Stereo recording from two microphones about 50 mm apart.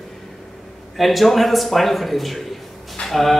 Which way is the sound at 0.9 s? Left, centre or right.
Centre.